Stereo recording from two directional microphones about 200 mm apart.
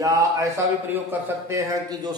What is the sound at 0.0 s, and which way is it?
A man's voice, 15° right (ahead or behind).